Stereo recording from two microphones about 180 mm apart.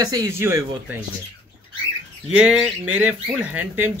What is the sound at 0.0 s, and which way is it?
Speech, 20° right (ahead or behind).